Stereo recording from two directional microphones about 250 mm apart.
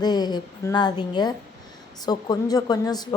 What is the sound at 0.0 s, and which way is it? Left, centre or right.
A woman's voice, centre.